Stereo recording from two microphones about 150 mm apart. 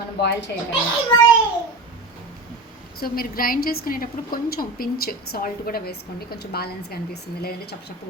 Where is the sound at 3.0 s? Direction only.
75° left (ahead or behind).